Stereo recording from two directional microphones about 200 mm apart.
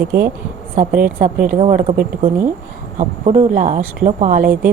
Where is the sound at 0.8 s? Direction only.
45° right (ahead or behind).